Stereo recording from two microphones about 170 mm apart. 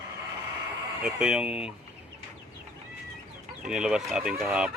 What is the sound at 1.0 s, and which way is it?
Speech, 5° right (ahead or behind).